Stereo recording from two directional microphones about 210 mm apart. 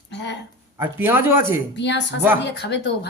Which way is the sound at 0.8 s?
10° right (ahead or behind).